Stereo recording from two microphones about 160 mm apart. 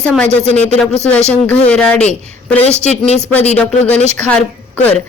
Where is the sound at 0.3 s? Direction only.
40° left (ahead or behind).